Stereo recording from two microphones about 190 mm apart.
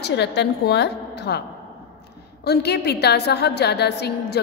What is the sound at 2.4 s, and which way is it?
A woman's voice, 60° left (ahead or behind).